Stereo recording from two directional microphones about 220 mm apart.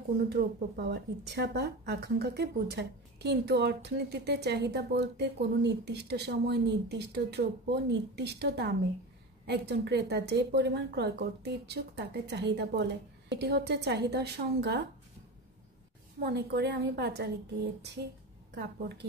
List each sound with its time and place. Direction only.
0.3 s a woman's voice: 50° right (ahead or behind)
16.2 s a woman's voice: 50° right (ahead or behind)
18.5 s a woman's voice: 50° right (ahead or behind)